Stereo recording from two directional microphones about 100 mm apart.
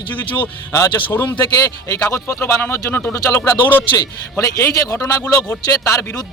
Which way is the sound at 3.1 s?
35° left (ahead or behind).